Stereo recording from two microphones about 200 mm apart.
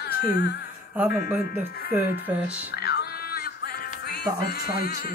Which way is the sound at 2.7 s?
55° left (ahead or behind).